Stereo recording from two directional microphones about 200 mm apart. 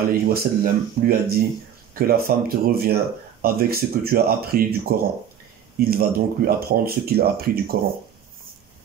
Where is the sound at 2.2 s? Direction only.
50° right (ahead or behind).